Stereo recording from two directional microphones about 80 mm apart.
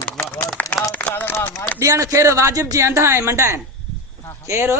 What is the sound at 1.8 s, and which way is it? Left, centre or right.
A man's voice, right.